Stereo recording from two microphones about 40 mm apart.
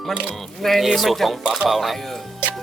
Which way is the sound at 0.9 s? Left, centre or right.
Centre.